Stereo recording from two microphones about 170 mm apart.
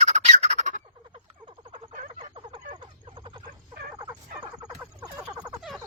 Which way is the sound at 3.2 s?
30° right (ahead or behind).